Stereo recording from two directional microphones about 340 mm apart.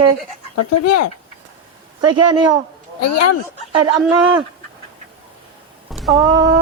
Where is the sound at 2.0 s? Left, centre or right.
Centre.